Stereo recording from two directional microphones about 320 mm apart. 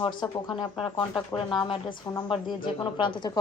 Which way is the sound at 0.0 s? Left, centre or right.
Centre.